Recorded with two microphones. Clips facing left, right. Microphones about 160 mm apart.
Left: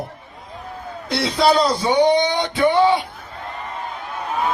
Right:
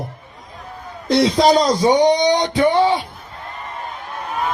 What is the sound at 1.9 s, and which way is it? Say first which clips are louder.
Music: right 1 dB; 15° right (ahead or behind).